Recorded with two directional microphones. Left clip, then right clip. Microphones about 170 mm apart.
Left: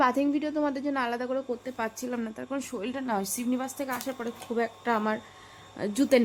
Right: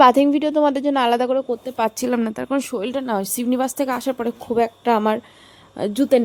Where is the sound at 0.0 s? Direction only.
45° right (ahead or behind).